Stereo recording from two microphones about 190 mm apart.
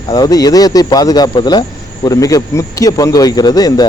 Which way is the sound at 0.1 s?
20° left (ahead or behind).